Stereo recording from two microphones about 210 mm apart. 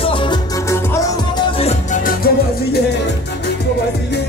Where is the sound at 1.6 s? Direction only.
35° left (ahead or behind).